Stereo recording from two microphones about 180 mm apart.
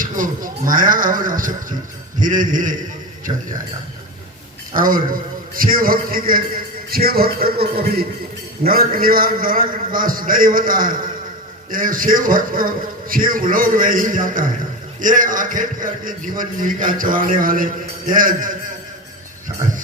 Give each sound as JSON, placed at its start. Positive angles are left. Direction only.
{"t": 0.0, "sound": "a man's voice", "side_deg": -50}
{"t": 3.3, "sound": "speech", "side_deg": -30}
{"t": 4.7, "sound": "a man's voice", "side_deg": -50}